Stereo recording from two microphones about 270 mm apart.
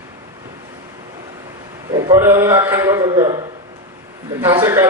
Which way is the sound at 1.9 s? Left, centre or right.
Centre.